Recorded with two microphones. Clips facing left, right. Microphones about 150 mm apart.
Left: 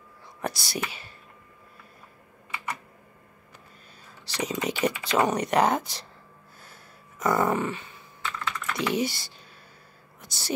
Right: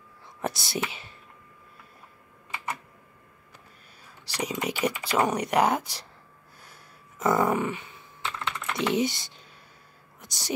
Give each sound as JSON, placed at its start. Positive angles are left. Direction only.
{"t": 0.4, "sound": "speech", "side_deg": -25}
{"t": 4.3, "sound": "speech", "side_deg": -10}
{"t": 7.3, "sound": "speech", "side_deg": -10}
{"t": 8.2, "sound": "typing", "side_deg": -25}
{"t": 10.2, "sound": "speech", "side_deg": -15}